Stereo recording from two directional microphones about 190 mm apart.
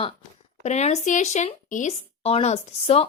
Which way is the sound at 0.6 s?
35° left (ahead or behind).